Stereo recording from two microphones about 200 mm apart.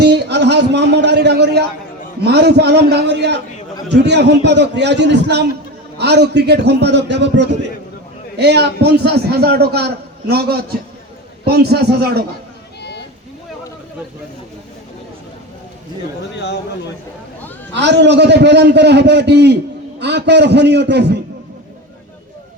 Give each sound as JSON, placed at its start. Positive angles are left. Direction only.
{"t": 0.0, "sound": "a man's voice", "side_deg": -55}
{"t": 16.4, "sound": "speech", "side_deg": 60}
{"t": 17.7, "sound": "a man's voice", "side_deg": -60}